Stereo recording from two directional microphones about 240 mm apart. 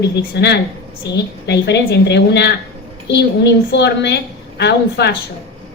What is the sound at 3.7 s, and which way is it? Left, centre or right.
A woman's voice, left.